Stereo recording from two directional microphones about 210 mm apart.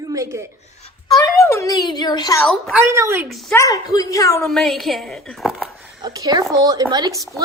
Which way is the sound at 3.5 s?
15° left (ahead or behind).